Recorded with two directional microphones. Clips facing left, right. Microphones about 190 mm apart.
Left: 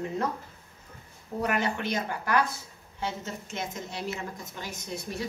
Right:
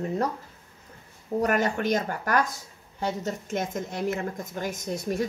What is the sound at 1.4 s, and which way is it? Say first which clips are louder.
A woman's voice: right 4 dB; 45° right (ahead or behind).